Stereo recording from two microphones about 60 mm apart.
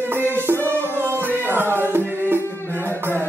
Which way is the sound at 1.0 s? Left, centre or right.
Right.